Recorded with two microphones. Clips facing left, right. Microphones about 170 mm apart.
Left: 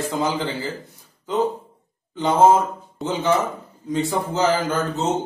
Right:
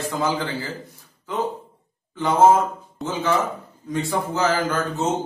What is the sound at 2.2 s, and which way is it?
A man's voice, 20° left (ahead or behind).